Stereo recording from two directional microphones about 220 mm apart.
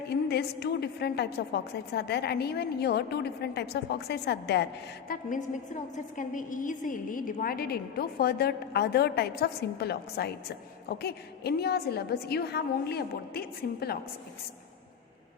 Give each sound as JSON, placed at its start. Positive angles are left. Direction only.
{"t": 0.1, "sound": "a woman's voice", "side_deg": 45}